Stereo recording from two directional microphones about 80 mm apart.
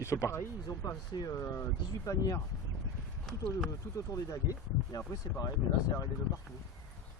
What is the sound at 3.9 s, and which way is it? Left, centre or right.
Speech, left.